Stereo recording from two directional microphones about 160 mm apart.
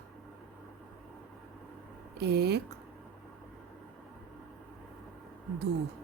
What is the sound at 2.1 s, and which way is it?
Speech, 90° right.